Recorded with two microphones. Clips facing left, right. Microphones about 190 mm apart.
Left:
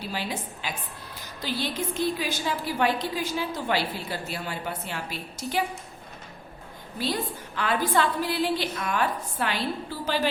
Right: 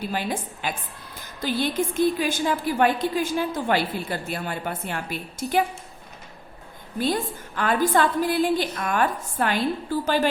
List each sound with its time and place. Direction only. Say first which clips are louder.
0.1 s a woman's voice: right 4 dB; 50° right (ahead or behind)
7.0 s a woman's voice: right 4 dB; 50° right (ahead or behind)